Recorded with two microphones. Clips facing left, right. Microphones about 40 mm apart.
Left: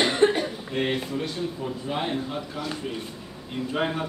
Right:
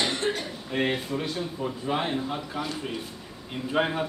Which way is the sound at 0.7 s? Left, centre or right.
Centre.